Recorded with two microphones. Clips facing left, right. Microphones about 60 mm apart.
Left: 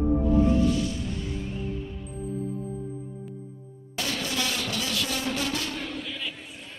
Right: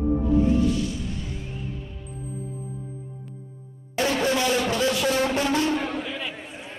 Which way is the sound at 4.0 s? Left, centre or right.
Right.